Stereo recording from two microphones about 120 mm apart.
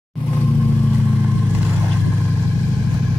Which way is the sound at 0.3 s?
15° left (ahead or behind).